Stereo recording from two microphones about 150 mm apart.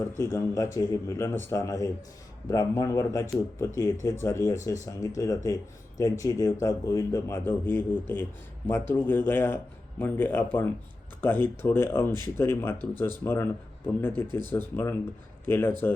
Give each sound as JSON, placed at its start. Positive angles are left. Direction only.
{"t": 0.2, "sound": "a man's voice", "side_deg": 20}